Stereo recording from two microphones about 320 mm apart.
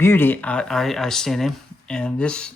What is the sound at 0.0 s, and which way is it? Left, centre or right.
Speech, centre.